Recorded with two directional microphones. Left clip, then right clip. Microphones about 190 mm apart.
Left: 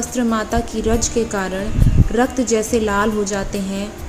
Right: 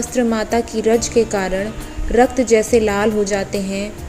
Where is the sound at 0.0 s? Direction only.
5° right (ahead or behind).